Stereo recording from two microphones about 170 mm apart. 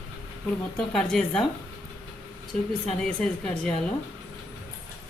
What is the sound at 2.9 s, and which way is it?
Speech, 5° left (ahead or behind).